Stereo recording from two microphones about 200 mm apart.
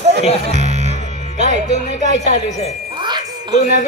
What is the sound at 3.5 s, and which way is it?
Wind chime, 35° left (ahead or behind).